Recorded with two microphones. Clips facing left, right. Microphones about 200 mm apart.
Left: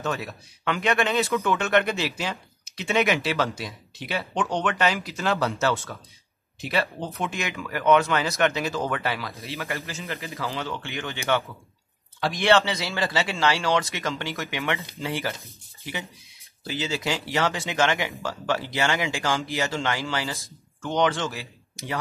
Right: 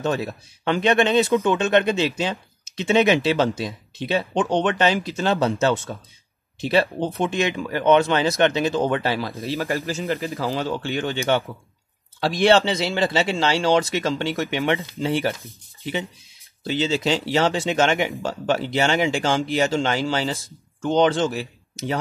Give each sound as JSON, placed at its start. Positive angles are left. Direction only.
{"t": 0.0, "sound": "speech", "side_deg": -30}
{"t": 1.5, "sound": "a man's voice", "side_deg": -20}
{"t": 16.6, "sound": "speech", "side_deg": -25}